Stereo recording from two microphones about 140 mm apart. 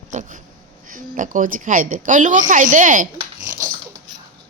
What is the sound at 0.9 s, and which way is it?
A woman's voice, 70° right (ahead or behind).